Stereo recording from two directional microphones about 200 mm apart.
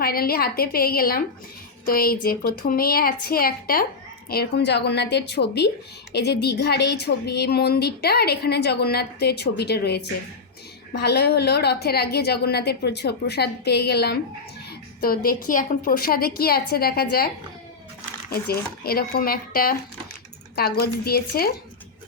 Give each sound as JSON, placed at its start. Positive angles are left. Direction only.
{"t": 0.0, "sound": "a woman's voice", "side_deg": 50}
{"t": 14.7, "sound": "a sound", "side_deg": 45}
{"t": 15.4, "sound": "a woman's voice", "side_deg": 45}
{"t": 18.8, "sound": "a woman's voice", "side_deg": 50}